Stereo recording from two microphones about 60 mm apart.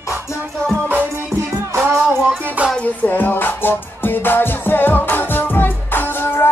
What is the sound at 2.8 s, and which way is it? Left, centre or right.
Music, left.